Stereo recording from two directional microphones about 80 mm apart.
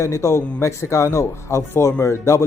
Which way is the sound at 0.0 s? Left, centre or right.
Left.